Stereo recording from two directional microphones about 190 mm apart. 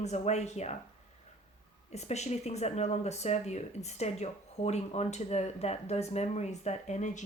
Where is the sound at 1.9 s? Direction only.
35° left (ahead or behind).